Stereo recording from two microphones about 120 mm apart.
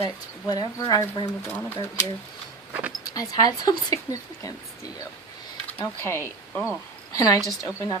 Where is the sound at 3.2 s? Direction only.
30° left (ahead or behind).